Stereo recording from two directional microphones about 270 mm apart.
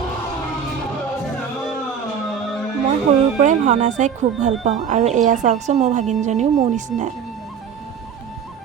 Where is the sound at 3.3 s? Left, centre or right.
Right.